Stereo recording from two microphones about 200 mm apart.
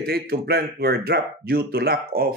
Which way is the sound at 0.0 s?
50° right (ahead or behind).